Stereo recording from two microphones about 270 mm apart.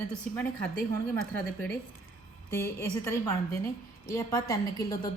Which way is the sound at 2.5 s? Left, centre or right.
Centre.